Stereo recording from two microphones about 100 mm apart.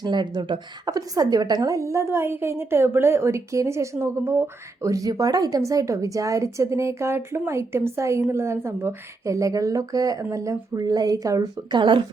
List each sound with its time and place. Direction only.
0.0 s speech: 45° right (ahead or behind)
0.9 s a woman's voice: 40° right (ahead or behind)
11.7 s speech: 55° right (ahead or behind)